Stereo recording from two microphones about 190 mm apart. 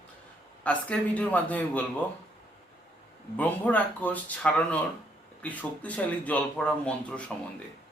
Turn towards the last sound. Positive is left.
turn(degrees=5)  # may be behind; listen again after turning